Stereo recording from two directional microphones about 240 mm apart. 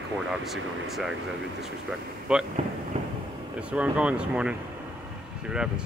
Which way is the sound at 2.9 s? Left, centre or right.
Right.